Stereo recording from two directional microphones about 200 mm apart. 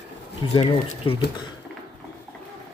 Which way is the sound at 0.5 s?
25° left (ahead or behind).